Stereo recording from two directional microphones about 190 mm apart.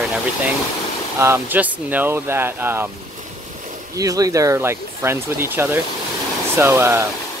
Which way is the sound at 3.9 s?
20° right (ahead or behind).